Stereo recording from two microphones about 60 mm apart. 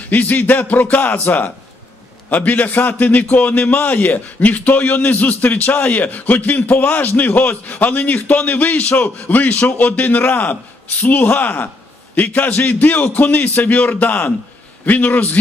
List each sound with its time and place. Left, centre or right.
0.1 s a man's voice: left